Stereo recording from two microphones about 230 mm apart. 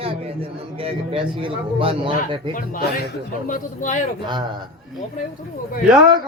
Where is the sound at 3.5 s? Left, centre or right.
Left.